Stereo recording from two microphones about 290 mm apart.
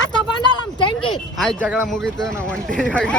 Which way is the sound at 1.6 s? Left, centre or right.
Centre.